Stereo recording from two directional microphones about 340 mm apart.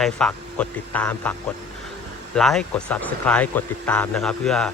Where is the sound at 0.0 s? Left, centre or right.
Centre.